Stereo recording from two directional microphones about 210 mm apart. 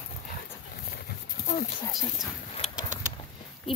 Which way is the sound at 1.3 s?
45° left (ahead or behind).